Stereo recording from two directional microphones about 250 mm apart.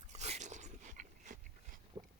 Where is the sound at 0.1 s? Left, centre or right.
Right.